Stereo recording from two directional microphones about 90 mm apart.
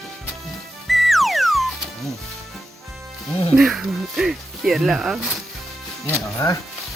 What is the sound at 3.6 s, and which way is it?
Speech, 5° right (ahead or behind).